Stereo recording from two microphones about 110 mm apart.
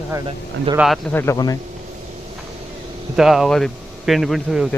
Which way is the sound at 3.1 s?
5° right (ahead or behind).